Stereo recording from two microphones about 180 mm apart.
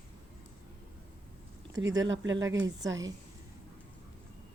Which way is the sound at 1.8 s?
90° right.